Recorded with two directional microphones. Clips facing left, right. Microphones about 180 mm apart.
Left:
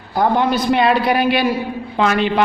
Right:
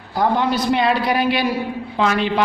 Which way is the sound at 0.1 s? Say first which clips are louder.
Left 2 dB; 55° left (ahead or behind).